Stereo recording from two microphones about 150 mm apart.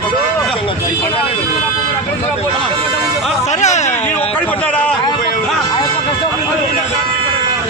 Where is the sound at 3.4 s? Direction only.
50° left (ahead or behind).